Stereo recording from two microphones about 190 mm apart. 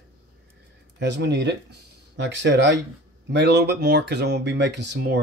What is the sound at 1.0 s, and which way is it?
Speech, 65° right (ahead or behind).